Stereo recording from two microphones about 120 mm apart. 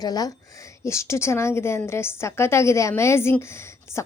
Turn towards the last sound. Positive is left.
turn(degrees=20)  # may be behind; listen again after turning